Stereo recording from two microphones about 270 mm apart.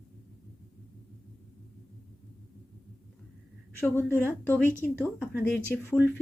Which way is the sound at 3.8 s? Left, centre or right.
Centre.